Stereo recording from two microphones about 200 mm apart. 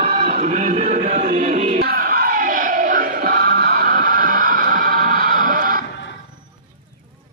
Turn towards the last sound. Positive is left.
turn(degrees=-45)  # may be behind; listen again after turning